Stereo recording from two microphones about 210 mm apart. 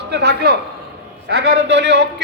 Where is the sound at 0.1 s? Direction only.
50° right (ahead or behind).